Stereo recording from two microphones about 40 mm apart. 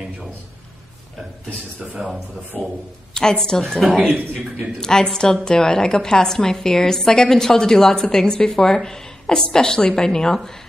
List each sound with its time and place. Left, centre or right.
2.0 s speech: centre
2.5 s a woman's voice: left